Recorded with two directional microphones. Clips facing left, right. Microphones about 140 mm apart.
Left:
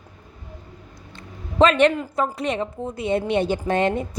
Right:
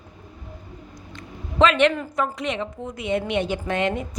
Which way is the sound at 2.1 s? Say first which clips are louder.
Left 2 dB; 35° left (ahead or behind).